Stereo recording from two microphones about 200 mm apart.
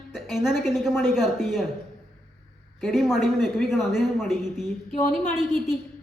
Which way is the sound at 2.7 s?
Centre (ahead or behind).